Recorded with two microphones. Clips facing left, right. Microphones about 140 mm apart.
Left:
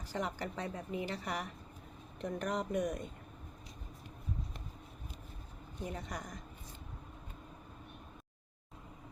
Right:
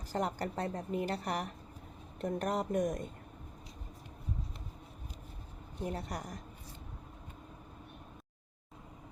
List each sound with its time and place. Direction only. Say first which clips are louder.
0.1 s a woman's voice: right 4 dB; 40° right (ahead or behind)
5.9 s a woman's voice: right 3 dB; 40° right (ahead or behind)